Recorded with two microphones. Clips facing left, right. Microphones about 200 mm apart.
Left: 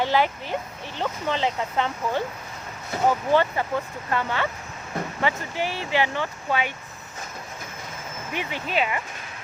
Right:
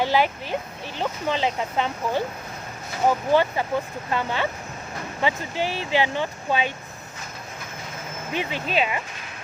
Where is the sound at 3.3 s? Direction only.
10° right (ahead or behind).